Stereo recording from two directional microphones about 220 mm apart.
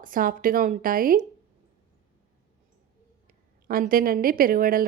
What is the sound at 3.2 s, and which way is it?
Speech, 40° right (ahead or behind).